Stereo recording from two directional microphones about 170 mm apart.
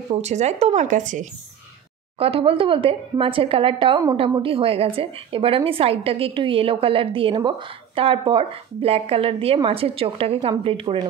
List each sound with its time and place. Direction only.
0.1 s a woman's voice: 40° right (ahead or behind)
2.1 s a woman's voice: 35° right (ahead or behind)